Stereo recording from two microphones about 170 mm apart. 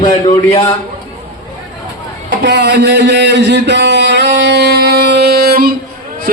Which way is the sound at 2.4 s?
85° right.